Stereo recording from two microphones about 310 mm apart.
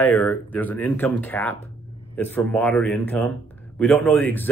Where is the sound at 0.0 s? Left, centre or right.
Centre.